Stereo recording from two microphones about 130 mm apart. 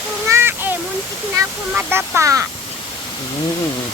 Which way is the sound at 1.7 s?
15° right (ahead or behind).